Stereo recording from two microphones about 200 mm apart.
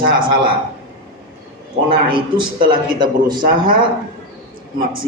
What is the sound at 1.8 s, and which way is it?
A man's voice, 25° right (ahead or behind).